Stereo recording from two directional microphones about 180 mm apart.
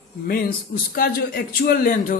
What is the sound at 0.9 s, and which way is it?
A man's voice, 55° left (ahead or behind).